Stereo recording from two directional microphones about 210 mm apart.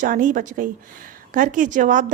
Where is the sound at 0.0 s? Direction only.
40° right (ahead or behind).